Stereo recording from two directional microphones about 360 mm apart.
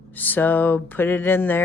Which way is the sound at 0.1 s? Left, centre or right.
Centre.